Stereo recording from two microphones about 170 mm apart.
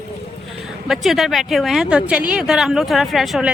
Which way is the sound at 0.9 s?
Centre (ahead or behind).